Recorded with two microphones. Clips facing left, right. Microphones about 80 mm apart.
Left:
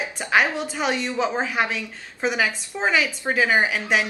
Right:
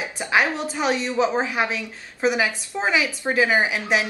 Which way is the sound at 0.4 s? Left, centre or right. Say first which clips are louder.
Even; centre.